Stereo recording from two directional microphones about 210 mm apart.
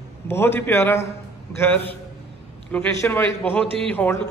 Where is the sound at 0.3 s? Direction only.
10° left (ahead or behind).